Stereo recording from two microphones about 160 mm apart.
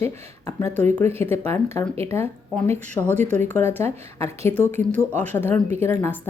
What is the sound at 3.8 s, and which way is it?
A woman's voice, 15° left (ahead or behind).